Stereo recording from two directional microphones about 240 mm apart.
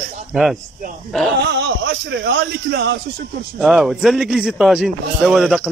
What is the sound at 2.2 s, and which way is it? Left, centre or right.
Speech, right.